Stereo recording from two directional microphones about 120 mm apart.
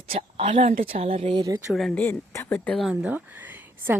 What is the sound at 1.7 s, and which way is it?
Speech, centre (ahead or behind).